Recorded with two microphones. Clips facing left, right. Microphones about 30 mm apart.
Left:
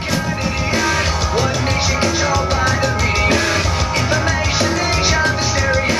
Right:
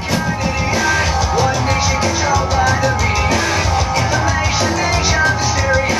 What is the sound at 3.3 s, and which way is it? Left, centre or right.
Music, left.